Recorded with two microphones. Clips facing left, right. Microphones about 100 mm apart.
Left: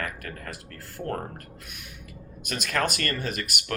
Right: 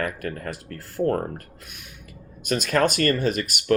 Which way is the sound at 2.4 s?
30° right (ahead or behind).